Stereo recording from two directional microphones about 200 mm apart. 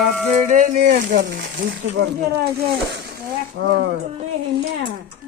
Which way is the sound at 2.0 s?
55° right (ahead or behind).